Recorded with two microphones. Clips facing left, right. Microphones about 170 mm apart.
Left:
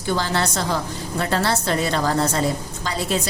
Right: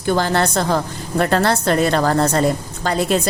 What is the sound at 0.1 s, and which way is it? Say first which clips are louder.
A woman's voice: right 5 dB; 50° right (ahead or behind).